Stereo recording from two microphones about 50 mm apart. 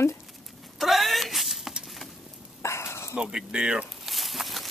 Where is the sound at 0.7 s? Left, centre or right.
Centre.